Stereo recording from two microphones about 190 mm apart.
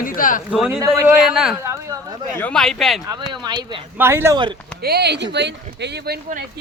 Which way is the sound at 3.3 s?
20° right (ahead or behind).